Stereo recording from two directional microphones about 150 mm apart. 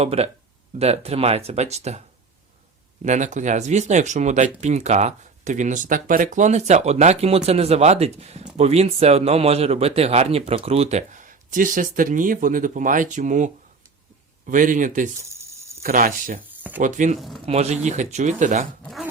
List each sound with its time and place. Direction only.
0.0 s speech: 45° right (ahead or behind)
3.0 s a man's voice: 55° right (ahead or behind)
15.3 s a sound: 20° right (ahead or behind)
15.8 s a man's voice: 65° right (ahead or behind)
17.2 s speech: centre (ahead or behind)
17.4 s speech: 45° right (ahead or behind)
18.8 s speech: centre (ahead or behind)